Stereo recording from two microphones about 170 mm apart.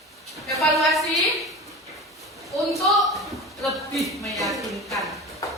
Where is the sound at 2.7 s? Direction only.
Centre (ahead or behind).